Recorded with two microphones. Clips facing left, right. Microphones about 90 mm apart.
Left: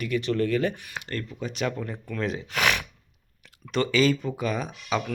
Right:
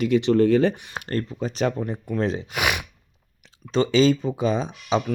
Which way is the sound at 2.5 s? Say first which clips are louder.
Even; 15° right (ahead or behind).